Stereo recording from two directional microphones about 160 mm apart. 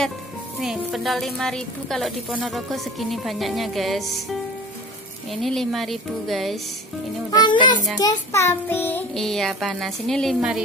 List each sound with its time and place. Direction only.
0.6 s a woman's voice: centre (ahead or behind)
7.2 s a child's voice: 25° left (ahead or behind); by 10.6 s centre (ahead or behind)